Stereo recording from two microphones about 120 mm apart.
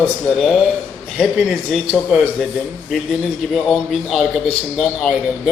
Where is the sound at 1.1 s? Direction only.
Centre (ahead or behind).